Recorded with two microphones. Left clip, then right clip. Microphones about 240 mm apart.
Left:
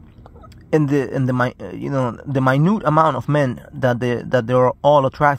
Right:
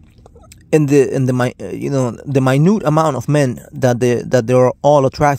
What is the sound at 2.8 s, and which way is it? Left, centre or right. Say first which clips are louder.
Speech: right 1 dB; right.